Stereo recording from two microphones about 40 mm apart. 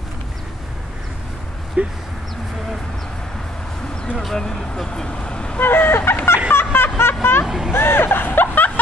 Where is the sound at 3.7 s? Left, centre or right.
Centre.